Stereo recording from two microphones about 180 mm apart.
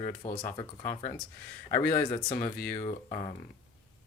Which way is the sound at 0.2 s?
30° left (ahead or behind).